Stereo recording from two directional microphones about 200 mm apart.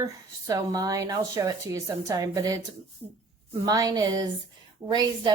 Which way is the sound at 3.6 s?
20° right (ahead or behind).